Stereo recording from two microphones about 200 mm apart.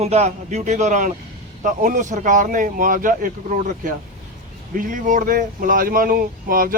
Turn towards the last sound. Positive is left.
turn(degrees=-45)  # may be behind; listen again after turning